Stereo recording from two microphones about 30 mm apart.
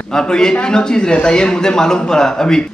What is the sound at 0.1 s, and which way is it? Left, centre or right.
Speech, left.